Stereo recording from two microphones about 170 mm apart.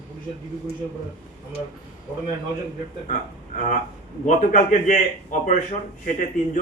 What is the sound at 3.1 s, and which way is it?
A man's voice, 45° left (ahead or behind).